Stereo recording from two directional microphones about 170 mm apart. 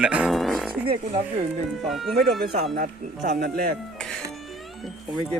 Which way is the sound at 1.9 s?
Centre (ahead or behind).